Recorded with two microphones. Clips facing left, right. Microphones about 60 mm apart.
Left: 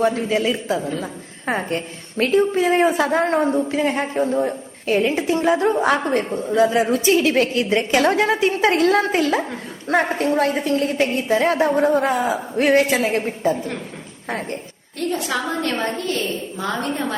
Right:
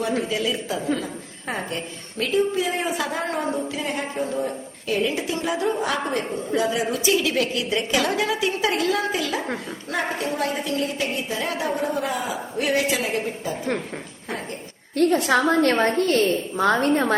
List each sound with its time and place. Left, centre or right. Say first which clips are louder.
0.2 s a woman's voice: left 4 dB; left
14.3 s a sound: left 5 dB; left
14.9 s a woman's voice: right 5 dB; right